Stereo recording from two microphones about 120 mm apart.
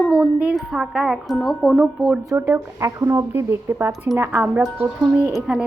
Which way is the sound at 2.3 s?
20° right (ahead or behind).